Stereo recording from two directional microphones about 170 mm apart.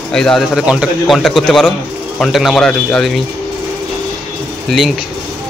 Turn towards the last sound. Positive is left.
turn(degrees=0)  # may be behind; listen again after turning